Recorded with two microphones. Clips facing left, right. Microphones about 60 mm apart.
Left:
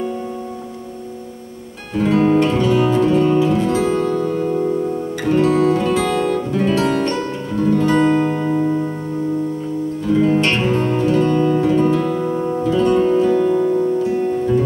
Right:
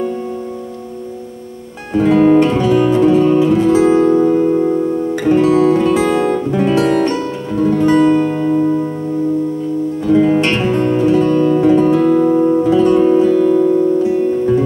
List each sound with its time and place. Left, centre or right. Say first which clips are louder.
2.0 s music: right 5 dB; centre
5.2 s music: right 3 dB; centre
8.3 s music: right 4 dB; centre
10.1 s music: right 3 dB; centre
13.4 s music: right 4 dB; centre